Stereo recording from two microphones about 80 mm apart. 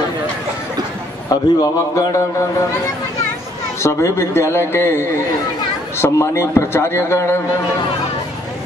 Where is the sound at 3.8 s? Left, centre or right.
Left.